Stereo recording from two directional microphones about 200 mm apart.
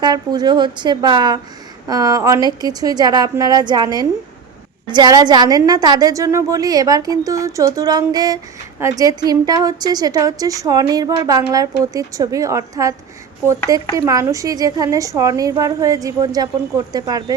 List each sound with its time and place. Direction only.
0.0 s a woman's voice: 20° right (ahead or behind)